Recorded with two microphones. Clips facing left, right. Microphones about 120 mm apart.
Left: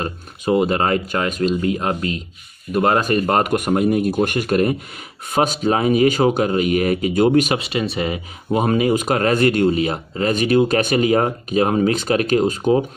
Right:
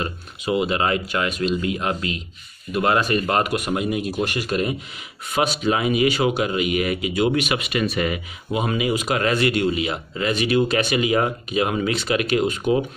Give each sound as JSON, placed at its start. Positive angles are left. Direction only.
{"t": 0.0, "sound": "speech", "side_deg": 45}
{"t": 8.5, "sound": "speech", "side_deg": 45}